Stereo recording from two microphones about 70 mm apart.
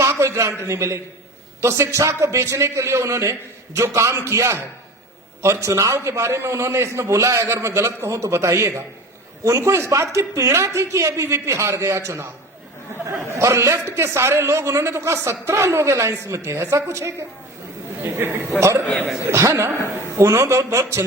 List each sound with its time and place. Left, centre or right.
0.0 s a man's voice: right
13.3 s a man's voice: right
18.0 s a man's voice: right
18.6 s a man's voice: right